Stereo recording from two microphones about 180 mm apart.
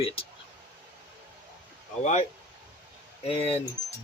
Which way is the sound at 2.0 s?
40° left (ahead or behind).